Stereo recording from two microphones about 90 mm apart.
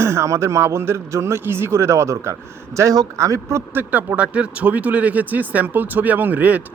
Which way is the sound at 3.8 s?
15° right (ahead or behind).